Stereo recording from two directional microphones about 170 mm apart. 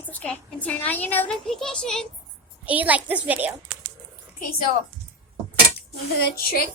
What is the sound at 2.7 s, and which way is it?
Speech, 10° right (ahead or behind).